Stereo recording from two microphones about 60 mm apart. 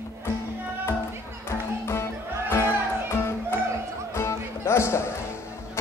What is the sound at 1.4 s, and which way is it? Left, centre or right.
Music, left.